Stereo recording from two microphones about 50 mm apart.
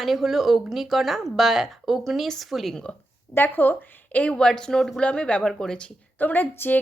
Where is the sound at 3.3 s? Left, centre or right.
Left.